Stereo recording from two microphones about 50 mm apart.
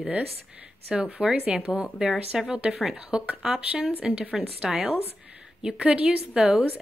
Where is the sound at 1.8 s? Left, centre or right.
Centre.